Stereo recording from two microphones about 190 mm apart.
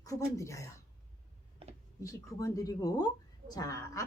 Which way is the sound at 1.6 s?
30° right (ahead or behind).